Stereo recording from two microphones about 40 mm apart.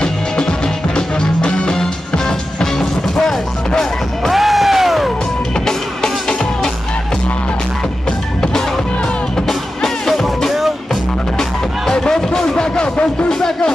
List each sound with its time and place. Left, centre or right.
0.0 s music: left
4.3 s music: centre
5.7 s music: centre
9.8 s music: centre
11.9 s music: centre